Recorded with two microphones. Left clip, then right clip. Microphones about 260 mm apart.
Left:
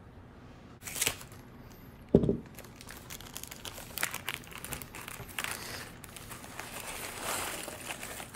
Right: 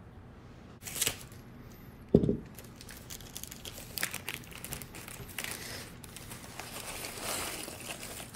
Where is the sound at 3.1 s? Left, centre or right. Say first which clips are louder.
Left 1 dB; left.